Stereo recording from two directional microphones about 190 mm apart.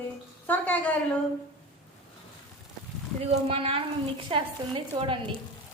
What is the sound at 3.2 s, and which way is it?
A woman's voice, 30° right (ahead or behind).